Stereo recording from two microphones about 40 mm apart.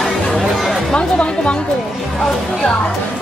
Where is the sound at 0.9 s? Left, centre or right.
Left.